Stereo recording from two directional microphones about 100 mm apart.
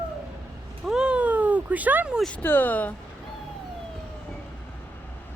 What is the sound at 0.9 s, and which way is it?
Cat, 10° right (ahead or behind).